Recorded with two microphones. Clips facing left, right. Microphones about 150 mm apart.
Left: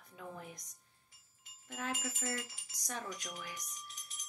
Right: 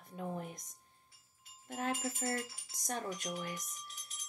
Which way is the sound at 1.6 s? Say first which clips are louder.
Right 4 dB; 35° right (ahead or behind).